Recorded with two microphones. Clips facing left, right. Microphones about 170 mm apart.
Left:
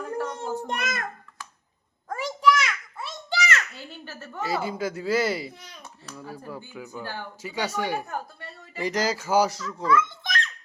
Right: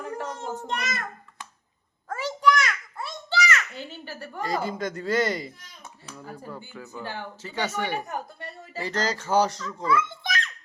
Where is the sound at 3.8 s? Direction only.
15° right (ahead or behind).